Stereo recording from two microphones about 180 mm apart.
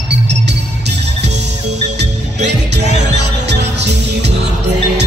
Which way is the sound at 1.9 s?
70° right (ahead or behind).